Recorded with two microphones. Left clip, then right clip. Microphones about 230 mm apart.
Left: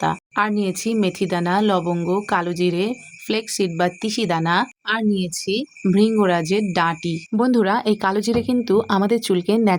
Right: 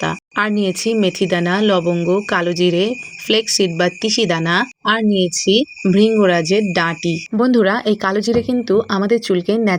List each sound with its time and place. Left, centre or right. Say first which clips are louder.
0.0 s speech: right 1 dB; centre